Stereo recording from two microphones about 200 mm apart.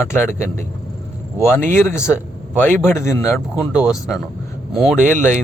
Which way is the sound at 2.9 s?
15° left (ahead or behind).